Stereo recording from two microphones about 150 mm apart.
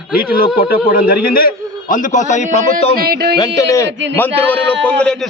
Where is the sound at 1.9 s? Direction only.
55° left (ahead or behind).